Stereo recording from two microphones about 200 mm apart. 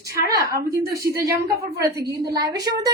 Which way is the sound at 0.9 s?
15° right (ahead or behind).